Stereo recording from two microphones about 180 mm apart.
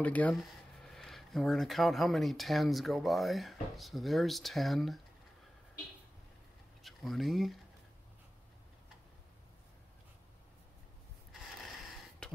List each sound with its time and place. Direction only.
0.0 s speech: 10° left (ahead or behind)
6.8 s speech: centre (ahead or behind)
12.2 s a sound: 5° left (ahead or behind)